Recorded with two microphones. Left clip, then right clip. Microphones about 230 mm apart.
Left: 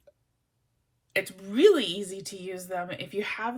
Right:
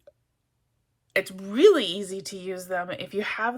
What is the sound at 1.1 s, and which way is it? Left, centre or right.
Speech, centre.